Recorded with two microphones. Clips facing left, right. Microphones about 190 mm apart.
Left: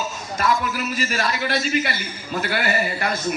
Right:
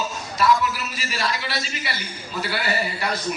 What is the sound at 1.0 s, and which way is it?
Speech, 50° left (ahead or behind).